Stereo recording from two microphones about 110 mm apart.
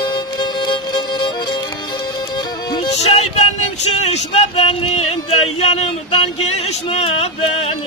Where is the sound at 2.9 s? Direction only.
70° left (ahead or behind).